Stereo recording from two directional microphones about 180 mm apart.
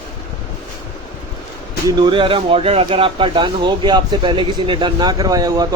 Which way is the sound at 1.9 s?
25° right (ahead or behind).